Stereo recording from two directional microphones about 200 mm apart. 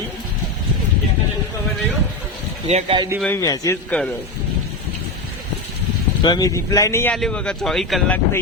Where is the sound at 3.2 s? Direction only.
10° left (ahead or behind).